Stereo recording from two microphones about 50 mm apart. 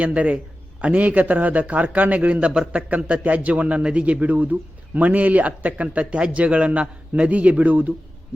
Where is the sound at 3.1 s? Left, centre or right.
Right.